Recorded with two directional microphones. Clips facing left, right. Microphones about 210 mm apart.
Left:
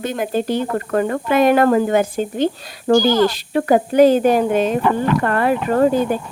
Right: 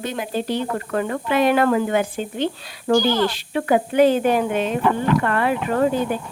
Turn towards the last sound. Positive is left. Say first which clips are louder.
# left 4 dB
turn(degrees=40)  # may be behind; listen again after turning